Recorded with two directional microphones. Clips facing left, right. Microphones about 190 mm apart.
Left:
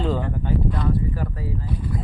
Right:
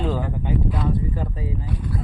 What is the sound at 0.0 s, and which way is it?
Speech, 5° right (ahead or behind).